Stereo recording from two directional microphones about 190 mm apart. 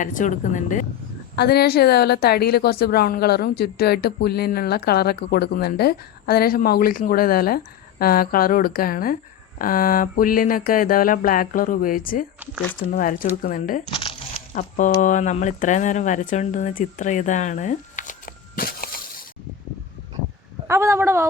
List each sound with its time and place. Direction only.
0.0 s a sound: 40° left (ahead or behind)
1.4 s a woman's voice: 55° left (ahead or behind)
9.6 s a sound: 45° left (ahead or behind)
13.9 s crumpling: 30° left (ahead or behind)
14.5 s speech: 40° left (ahead or behind)
20.7 s a woman's voice: 15° right (ahead or behind)